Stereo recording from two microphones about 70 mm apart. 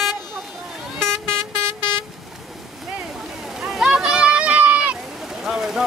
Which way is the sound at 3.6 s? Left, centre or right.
Centre.